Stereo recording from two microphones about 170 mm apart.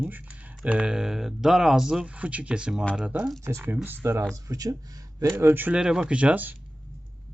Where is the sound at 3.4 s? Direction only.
15° right (ahead or behind).